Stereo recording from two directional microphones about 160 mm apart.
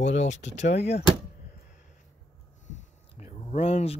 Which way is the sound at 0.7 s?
90° left.